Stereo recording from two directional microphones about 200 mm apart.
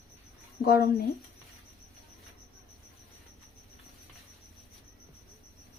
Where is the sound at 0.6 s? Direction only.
50° left (ahead or behind).